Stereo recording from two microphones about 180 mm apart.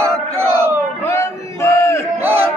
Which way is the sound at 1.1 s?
15° left (ahead or behind).